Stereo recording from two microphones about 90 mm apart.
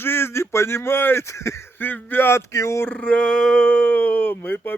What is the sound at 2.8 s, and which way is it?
Speech, 10° left (ahead or behind).